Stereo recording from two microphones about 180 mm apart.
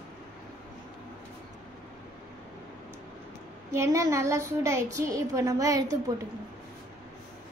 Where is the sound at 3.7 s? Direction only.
15° right (ahead or behind).